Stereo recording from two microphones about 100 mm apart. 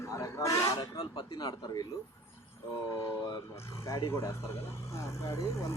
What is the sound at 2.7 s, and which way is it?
Speech, 30° left (ahead or behind).